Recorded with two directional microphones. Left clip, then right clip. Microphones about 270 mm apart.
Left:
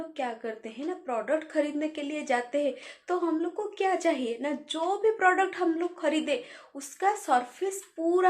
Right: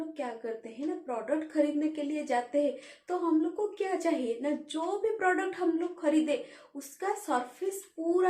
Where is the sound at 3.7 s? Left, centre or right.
Centre.